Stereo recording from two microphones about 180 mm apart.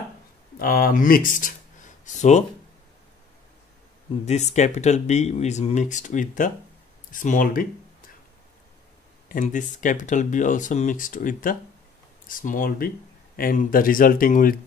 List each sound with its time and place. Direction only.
0.6 s speech: 55° left (ahead or behind)
4.3 s speech: 40° left (ahead or behind)
9.3 s speech: 45° left (ahead or behind)